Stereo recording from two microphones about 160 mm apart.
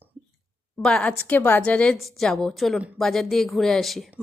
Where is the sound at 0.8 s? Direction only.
5° left (ahead or behind).